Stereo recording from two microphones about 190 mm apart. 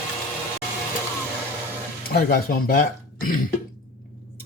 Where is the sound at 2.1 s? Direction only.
55° left (ahead or behind).